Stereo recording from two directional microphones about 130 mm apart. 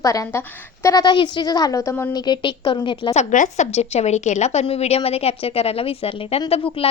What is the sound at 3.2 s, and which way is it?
A woman's voice, 75° left (ahead or behind).